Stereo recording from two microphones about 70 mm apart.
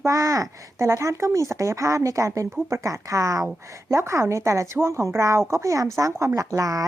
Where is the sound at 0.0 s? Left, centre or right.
Right.